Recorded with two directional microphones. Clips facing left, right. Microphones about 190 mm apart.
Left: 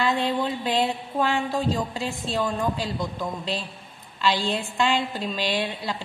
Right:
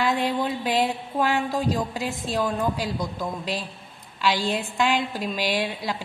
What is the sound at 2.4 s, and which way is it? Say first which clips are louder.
Speech: right 1 dB; centre (ahead or behind).